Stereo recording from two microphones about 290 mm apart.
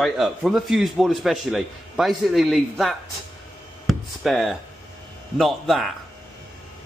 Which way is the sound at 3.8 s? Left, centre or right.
Centre.